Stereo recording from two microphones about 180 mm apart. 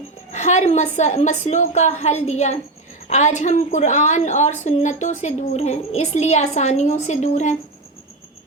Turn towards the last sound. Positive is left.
turn(degrees=40)  # may be behind; listen again after turning